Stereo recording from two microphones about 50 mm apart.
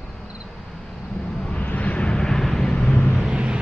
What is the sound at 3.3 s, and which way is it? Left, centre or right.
Vehicle, centre.